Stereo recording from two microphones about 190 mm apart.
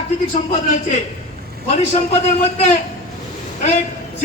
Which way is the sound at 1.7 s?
35° left (ahead or behind).